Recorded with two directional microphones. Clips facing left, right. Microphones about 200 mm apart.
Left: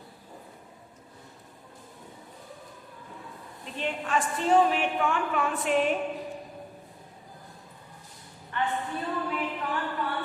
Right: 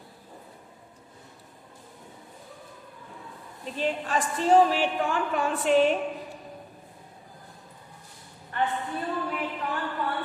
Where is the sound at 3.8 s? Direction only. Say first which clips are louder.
Right 2 dB; 35° right (ahead or behind).